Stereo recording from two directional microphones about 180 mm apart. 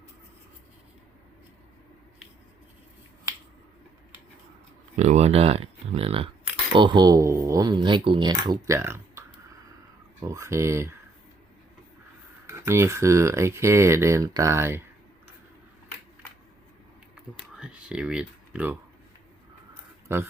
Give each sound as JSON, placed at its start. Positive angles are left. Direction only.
{"t": 4.9, "sound": "speech", "side_deg": -40}
{"t": 12.5, "sound": "speech", "side_deg": -15}
{"t": 17.6, "sound": "speech", "side_deg": -5}
{"t": 20.1, "sound": "speech", "side_deg": -15}